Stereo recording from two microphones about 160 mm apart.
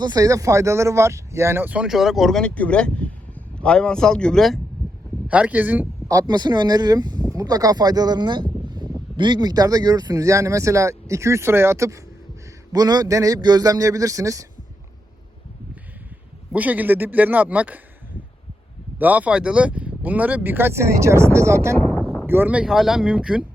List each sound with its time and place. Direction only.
0.0 s speech: 25° right (ahead or behind); by 4.6 s centre (ahead or behind)
5.3 s speech: 10° right (ahead or behind)
6.1 s a man's voice: 25° right (ahead or behind)
16.5 s speech: 10° right (ahead or behind)
18.9 s speech: 10° right (ahead or behind)